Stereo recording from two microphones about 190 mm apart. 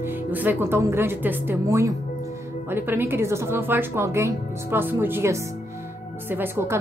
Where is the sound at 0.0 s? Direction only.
10° right (ahead or behind).